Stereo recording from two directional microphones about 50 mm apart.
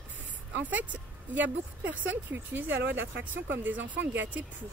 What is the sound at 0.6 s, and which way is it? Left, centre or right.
Speech, right.